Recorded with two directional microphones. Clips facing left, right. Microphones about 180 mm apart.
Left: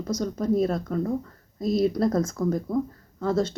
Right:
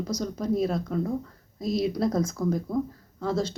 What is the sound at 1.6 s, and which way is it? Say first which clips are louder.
Speech: left 3 dB; 50° left (ahead or behind).